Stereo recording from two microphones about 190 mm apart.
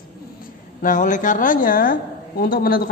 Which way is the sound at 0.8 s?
45° left (ahead or behind).